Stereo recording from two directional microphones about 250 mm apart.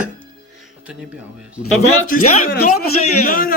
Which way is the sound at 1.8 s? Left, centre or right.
Left.